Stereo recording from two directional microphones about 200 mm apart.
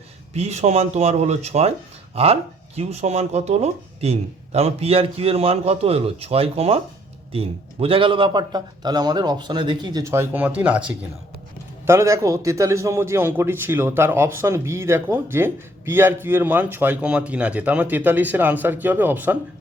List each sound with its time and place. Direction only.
0.3 s a man's voice: 35° right (ahead or behind); by 19.4 s 10° right (ahead or behind)